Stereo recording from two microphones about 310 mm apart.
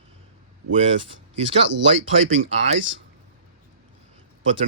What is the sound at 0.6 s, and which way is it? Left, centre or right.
Speech, right.